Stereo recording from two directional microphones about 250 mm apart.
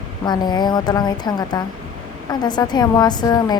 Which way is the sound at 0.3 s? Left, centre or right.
Centre.